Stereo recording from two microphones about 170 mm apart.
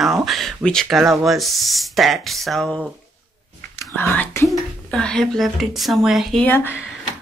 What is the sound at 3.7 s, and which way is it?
Speech, 15° left (ahead or behind).